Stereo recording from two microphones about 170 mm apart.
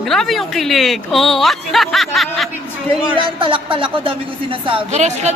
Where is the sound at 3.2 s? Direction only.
30° right (ahead or behind).